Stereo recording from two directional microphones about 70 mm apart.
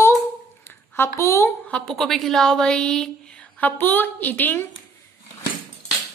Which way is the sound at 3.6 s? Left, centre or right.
Left.